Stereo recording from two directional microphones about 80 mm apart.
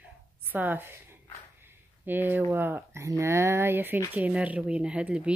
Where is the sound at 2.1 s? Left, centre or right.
Right.